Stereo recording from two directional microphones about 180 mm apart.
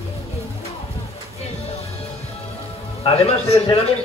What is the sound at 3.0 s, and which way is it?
Speech, 35° left (ahead or behind).